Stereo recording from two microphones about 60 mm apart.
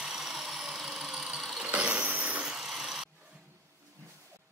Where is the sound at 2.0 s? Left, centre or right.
Right.